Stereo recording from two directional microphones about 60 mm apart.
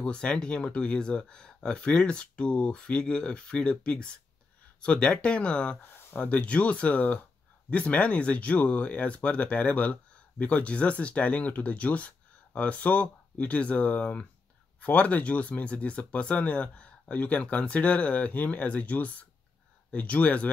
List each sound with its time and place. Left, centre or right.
0.0 s speech: centre